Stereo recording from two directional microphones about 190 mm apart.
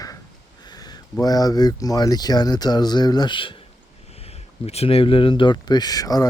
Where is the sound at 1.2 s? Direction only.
20° left (ahead or behind).